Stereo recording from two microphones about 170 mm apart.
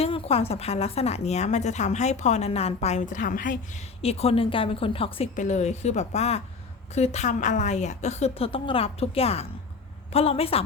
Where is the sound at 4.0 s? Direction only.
35° left (ahead or behind).